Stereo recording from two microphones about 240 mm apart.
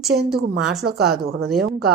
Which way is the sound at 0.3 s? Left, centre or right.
Right.